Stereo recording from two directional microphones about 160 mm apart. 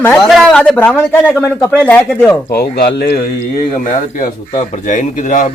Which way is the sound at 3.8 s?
55° left (ahead or behind).